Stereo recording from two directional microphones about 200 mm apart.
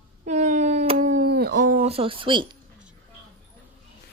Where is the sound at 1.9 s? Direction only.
25° right (ahead or behind).